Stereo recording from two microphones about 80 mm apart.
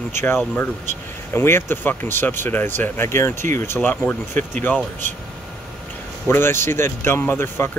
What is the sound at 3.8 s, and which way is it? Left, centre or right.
Speech, centre.